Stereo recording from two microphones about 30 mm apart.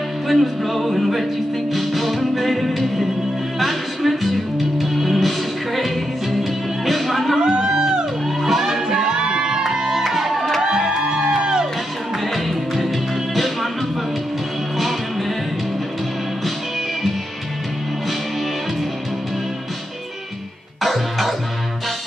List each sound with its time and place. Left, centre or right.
0.3 s music: centre
6.9 s music: centre
7.3 s a sound: right
8.4 s music: centre
8.8 s music: right
9.6 s music: centre
11.0 s music: right
12.3 s music: centre
14.8 s music: centre
20.8 s music: centre